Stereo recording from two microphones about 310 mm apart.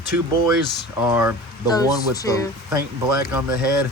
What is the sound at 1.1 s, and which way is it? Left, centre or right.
Speech, centre.